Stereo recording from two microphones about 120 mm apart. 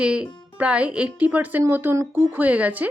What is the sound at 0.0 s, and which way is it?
Speech, 10° right (ahead or behind).